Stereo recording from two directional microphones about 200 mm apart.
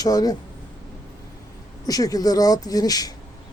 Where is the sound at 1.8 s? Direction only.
20° left (ahead or behind).